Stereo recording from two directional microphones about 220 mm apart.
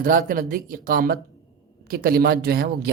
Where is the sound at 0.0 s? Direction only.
40° right (ahead or behind).